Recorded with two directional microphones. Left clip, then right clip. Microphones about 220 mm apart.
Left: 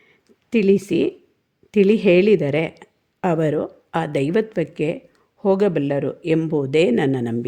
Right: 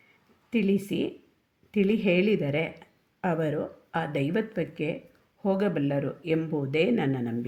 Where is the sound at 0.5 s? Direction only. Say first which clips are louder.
Left 10 dB; 50° left (ahead or behind).